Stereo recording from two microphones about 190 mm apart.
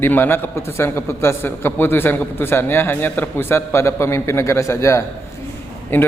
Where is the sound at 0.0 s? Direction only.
10° left (ahead or behind).